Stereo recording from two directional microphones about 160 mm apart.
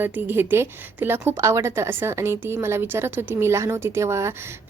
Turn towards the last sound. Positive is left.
turn(degrees=-15)  # may be behind; listen again after turning